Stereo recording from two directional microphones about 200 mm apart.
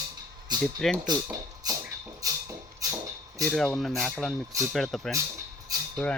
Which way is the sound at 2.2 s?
15° right (ahead or behind).